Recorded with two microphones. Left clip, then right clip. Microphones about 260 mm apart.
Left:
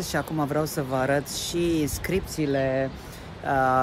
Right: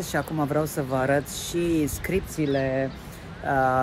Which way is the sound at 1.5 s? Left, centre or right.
Right.